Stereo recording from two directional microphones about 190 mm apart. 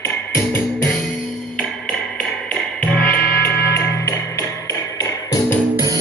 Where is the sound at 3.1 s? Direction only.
60° left (ahead or behind).